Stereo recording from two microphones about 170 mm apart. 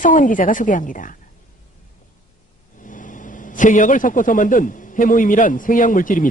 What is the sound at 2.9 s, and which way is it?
A man's voice, 50° left (ahead or behind).